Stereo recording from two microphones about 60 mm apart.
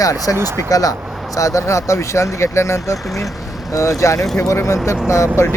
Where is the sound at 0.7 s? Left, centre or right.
Left.